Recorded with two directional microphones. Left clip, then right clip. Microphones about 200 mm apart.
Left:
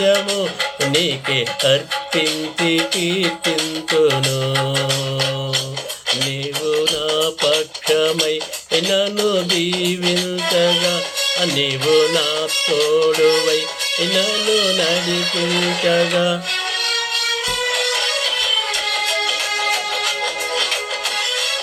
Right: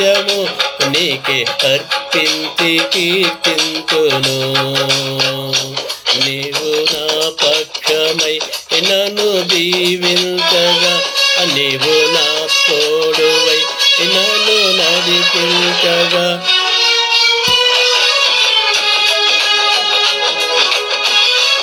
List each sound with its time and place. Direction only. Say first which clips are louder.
0.1 s music: right 4 dB; 25° right (ahead or behind)
2.1 s music: right 5 dB; 25° right (ahead or behind)
8.9 s music: right 4 dB; 10° left (ahead or behind)
9.6 s music: right 6 dB; 25° right (ahead or behind)